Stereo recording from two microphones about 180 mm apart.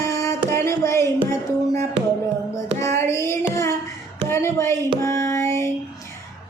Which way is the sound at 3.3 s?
15° left (ahead or behind).